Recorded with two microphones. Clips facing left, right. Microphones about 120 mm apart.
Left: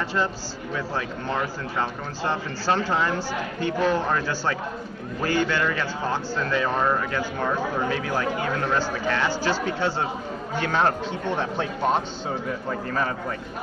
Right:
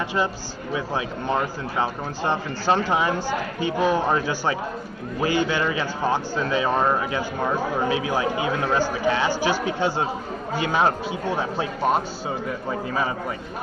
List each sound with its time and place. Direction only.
0.7 s speech: 15° right (ahead or behind)